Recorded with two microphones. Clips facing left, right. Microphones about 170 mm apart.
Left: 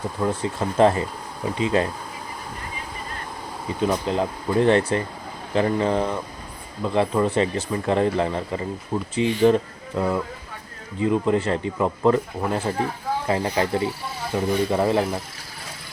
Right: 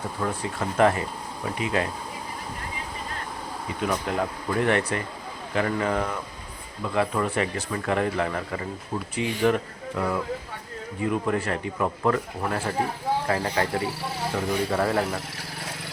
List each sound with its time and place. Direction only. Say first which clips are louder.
0.8 s speech: left 3 dB; 30° left (ahead or behind)
3.8 s speech: left 4 dB; 25° left (ahead or behind)